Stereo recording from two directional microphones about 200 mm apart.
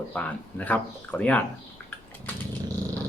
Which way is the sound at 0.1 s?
5° left (ahead or behind).